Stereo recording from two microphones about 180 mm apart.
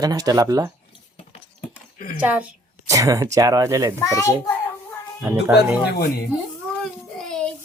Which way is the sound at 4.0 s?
15° left (ahead or behind).